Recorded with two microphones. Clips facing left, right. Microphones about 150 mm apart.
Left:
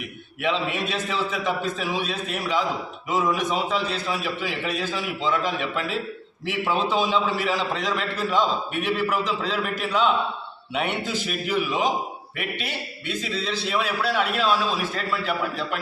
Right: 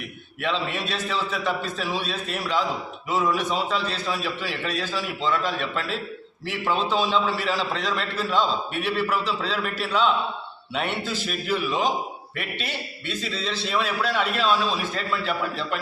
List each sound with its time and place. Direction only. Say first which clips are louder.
0.4 s a man's voice: left 2 dB; 15° left (ahead or behind)